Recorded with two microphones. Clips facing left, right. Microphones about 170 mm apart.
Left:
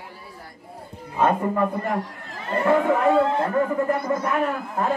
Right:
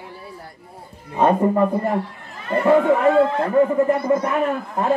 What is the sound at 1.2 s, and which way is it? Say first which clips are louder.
Speech: right 4 dB; 30° right (ahead or behind).